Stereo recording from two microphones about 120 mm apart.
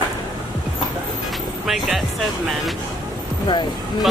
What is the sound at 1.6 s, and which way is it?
Speech, centre (ahead or behind).